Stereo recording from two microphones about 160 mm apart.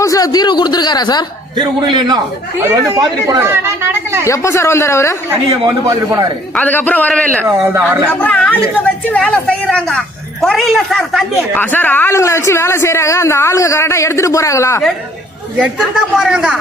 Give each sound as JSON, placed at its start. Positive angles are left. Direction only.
{"t": 0.0, "sound": "speech", "side_deg": 20}
{"t": 1.5, "sound": "a man's voice", "side_deg": -30}
{"t": 4.3, "sound": "speech", "side_deg": 15}
{"t": 5.3, "sound": "a man's voice", "side_deg": -20}
{"t": 6.6, "sound": "speech", "side_deg": 10}
{"t": 7.4, "sound": "speech", "side_deg": -15}
{"t": 8.1, "sound": "speech", "side_deg": 10}
{"t": 15.6, "sound": "speech", "side_deg": 0}